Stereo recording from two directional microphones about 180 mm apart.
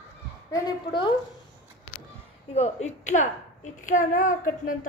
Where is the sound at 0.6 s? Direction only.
25° left (ahead or behind).